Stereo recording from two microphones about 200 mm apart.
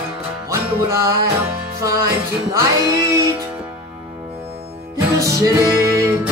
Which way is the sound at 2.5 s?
15° right (ahead or behind).